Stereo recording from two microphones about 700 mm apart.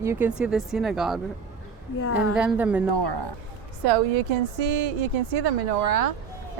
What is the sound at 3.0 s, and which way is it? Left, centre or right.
Speech, right.